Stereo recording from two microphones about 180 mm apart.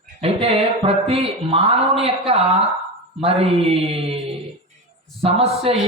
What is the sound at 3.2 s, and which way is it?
Mantra, 35° right (ahead or behind).